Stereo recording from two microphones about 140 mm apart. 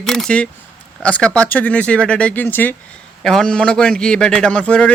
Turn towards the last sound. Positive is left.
turn(degrees=10)  # may be behind; listen again after turning